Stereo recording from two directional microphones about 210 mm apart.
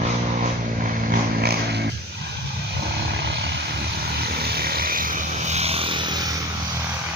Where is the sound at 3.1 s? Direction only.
55° right (ahead or behind); by 6.4 s 20° right (ahead or behind).